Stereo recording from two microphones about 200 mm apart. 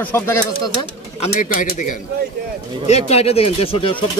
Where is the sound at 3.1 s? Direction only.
30° left (ahead or behind).